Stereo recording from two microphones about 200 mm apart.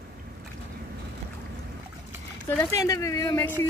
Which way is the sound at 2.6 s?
15° left (ahead or behind).